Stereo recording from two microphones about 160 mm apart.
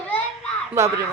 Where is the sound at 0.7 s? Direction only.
20° right (ahead or behind).